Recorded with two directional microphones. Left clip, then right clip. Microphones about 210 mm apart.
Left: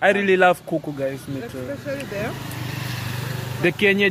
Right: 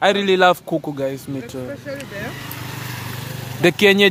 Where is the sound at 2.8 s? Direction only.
45° right (ahead or behind).